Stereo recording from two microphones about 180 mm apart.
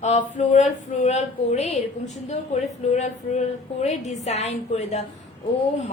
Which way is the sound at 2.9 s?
40° left (ahead or behind).